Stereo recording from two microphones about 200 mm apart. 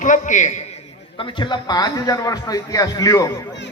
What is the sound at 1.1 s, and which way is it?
A man's voice, 25° left (ahead or behind).